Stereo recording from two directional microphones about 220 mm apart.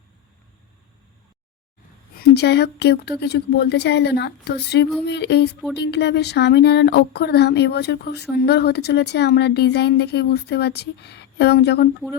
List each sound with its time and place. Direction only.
2.1 s speech: 50° left (ahead or behind)